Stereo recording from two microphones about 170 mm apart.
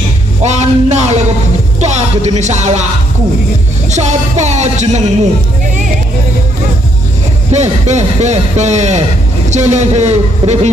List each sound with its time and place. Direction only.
0.4 s a sound: 40° right (ahead or behind)
1.8 s speech: 40° right (ahead or behind)
3.9 s speech: 45° right (ahead or behind)
7.5 s speech: 40° right (ahead or behind)